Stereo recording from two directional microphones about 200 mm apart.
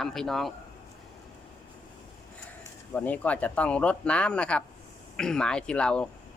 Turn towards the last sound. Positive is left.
turn(degrees=5)  # may be behind; listen again after turning